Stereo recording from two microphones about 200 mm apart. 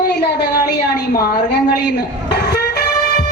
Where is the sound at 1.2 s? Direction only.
55° left (ahead or behind).